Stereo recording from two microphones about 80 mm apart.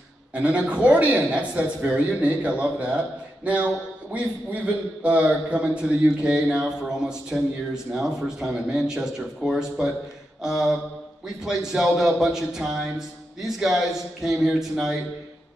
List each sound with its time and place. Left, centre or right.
0.3 s a man's voice: centre